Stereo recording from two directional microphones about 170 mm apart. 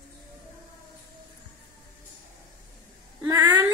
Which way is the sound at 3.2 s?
20° right (ahead or behind).